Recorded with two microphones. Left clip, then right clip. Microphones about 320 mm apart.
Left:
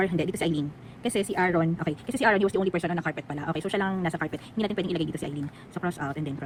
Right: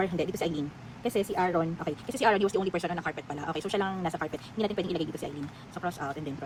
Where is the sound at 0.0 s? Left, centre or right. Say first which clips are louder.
Left 3 dB; left.